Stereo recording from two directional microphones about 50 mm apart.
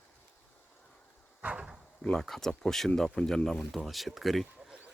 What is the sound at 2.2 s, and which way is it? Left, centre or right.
Speech, centre.